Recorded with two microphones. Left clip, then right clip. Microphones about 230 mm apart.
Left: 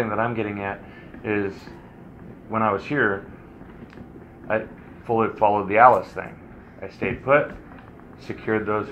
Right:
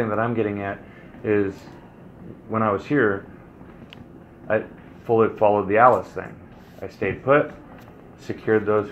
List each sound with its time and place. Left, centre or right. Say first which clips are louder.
0.0 s speech: right 1 dB; right
2.5 s speech: right 1 dB; right
4.5 s speech: right 2 dB; right
8.5 s speech: right 4 dB; right